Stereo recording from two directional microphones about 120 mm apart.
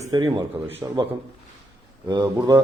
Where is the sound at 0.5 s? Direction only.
25° right (ahead or behind).